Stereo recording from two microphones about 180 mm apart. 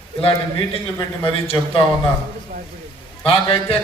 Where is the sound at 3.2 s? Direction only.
30° left (ahead or behind).